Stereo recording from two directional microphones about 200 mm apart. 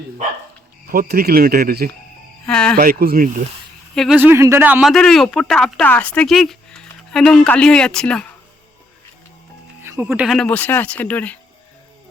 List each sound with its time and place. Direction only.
0.9 s speech: 50° right (ahead or behind)
2.5 s speech: 5° left (ahead or behind)
2.7 s speech: 45° right (ahead or behind)
3.9 s speech: centre (ahead or behind)
4.2 s speech: 10° right (ahead or behind); by 8.3 s 5° left (ahead or behind)
9.8 s speech: 10° right (ahead or behind); by 11.3 s 5° left (ahead or behind)